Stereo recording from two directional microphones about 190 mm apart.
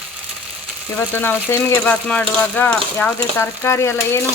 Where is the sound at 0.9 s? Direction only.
10° left (ahead or behind).